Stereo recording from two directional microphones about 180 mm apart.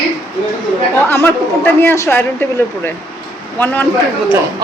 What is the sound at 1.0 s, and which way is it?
A woman's voice, 10° left (ahead or behind).